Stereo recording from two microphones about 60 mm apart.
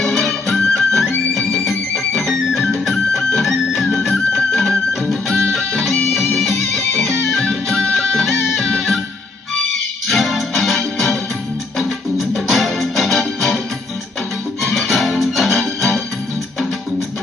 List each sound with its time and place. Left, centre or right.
0.0 s music: centre
10.1 s music: centre
14.6 s music: centre